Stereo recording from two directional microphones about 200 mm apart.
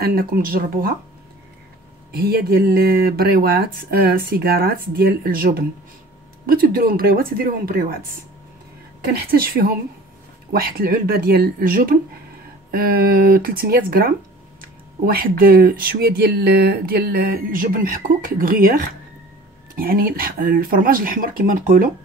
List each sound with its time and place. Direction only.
0.0 s speech: 50° right (ahead or behind)
2.1 s speech: 50° right (ahead or behind)
9.0 s speech: 50° right (ahead or behind)
19.7 s speech: 45° right (ahead or behind)